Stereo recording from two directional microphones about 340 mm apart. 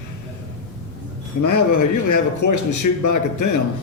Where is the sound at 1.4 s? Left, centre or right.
Left.